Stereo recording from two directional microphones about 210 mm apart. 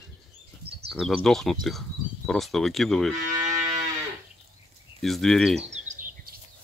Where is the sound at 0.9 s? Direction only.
Centre (ahead or behind).